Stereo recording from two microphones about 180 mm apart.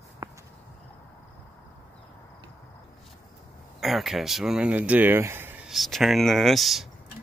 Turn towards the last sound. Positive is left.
turn(degrees=0)  # may be behind; listen again after turning